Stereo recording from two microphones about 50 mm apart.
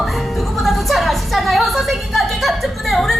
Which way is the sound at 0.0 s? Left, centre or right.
Centre.